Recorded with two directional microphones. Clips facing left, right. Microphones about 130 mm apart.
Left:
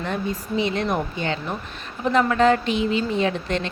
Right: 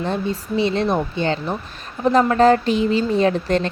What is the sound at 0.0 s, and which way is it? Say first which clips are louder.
A woman's voice: right 4 dB; 30° right (ahead or behind).